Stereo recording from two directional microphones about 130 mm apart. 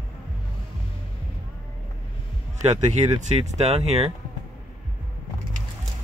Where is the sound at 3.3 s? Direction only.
55° right (ahead or behind).